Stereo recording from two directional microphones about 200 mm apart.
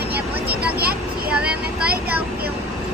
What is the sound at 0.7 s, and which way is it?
Vehicle, 50° right (ahead or behind).